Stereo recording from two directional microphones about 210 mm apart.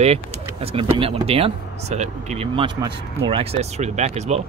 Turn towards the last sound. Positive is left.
turn(degrees=-30)  # may be behind; listen again after turning